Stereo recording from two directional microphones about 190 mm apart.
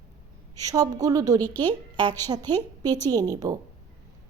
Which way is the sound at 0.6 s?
20° right (ahead or behind).